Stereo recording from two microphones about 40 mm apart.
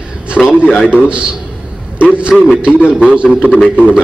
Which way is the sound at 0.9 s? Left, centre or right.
Right.